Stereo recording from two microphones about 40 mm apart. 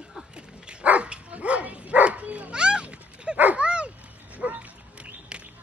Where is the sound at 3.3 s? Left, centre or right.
Right.